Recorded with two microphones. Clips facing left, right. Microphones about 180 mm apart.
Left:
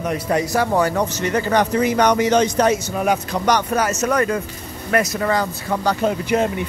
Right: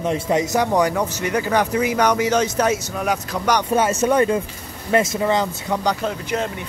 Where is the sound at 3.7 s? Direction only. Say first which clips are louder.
Right 2 dB; 30° right (ahead or behind).